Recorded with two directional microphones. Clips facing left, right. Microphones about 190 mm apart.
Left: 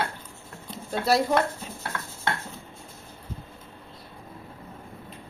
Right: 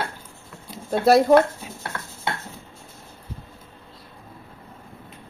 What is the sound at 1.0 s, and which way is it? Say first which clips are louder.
Speech: right 8 dB; 50° right (ahead or behind).